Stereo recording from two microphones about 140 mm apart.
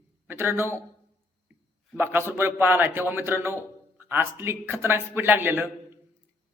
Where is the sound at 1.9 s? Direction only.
15° right (ahead or behind).